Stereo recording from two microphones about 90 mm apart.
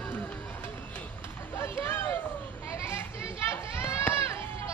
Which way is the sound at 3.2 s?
30° left (ahead or behind).